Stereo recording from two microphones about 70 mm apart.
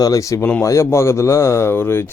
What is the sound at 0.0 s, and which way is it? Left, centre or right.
Speech, left.